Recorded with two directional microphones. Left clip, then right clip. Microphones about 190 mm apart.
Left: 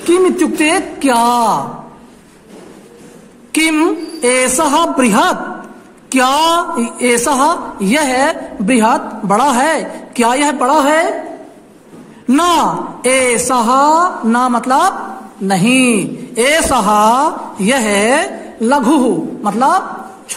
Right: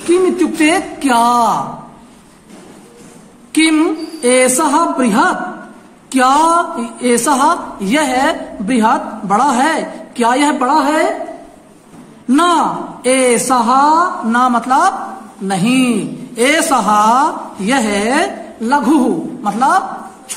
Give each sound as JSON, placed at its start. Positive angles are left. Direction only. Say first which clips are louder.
{"t": 0.1, "sound": "a woman's voice", "louder": "left 1 dB", "side_deg": 20}
{"t": 3.5, "sound": "a man's voice", "louder": "even", "side_deg": 30}
{"t": 12.3, "sound": "a woman's voice", "louder": "even", "side_deg": 30}